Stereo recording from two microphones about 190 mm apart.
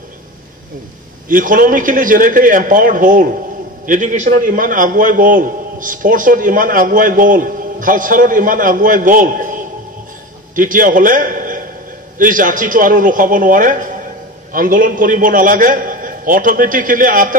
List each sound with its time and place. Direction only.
1.3 s a man's voice: 45° right (ahead or behind)